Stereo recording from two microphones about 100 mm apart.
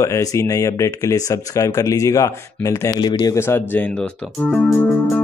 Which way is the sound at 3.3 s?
25° left (ahead or behind).